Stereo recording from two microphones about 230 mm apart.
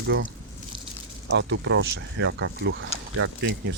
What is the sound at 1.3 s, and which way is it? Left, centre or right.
Speech, right.